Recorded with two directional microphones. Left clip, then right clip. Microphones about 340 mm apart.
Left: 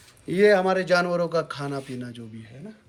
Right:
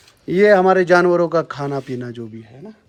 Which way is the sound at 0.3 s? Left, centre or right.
Right.